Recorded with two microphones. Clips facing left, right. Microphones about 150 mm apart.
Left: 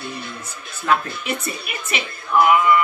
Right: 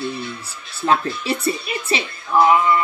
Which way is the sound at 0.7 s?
30° right (ahead or behind).